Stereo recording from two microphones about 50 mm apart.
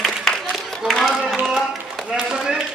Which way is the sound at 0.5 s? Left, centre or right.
Centre.